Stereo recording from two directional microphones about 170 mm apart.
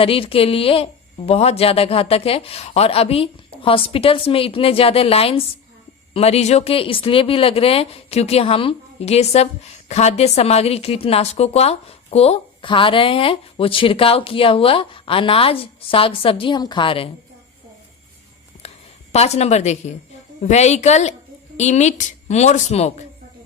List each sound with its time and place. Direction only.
0.0 s a woman's voice: 35° left (ahead or behind)
19.1 s a woman's voice: 40° left (ahead or behind)